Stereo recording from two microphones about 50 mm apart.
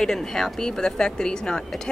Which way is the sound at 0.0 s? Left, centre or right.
Centre.